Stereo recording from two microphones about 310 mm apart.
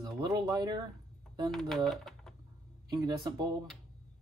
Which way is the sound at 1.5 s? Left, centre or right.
Centre.